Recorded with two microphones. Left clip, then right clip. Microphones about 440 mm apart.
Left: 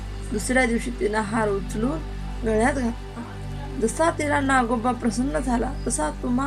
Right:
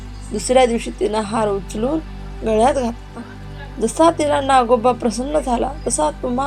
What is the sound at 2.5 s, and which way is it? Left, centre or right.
A woman's voice, centre.